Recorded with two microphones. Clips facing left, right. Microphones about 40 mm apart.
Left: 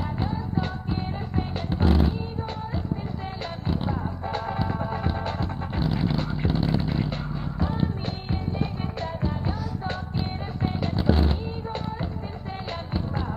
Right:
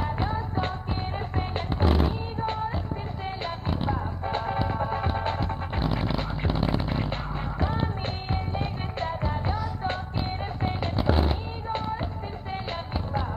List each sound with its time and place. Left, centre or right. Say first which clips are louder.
0.0 s music: right 1 dB; right
3.8 s music: even; centre